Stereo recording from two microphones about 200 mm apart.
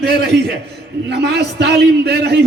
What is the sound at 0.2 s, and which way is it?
A man's voice, 55° right (ahead or behind).